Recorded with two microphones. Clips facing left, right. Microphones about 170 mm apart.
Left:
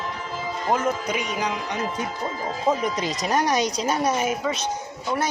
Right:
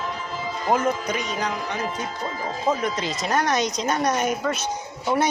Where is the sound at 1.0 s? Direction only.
10° left (ahead or behind).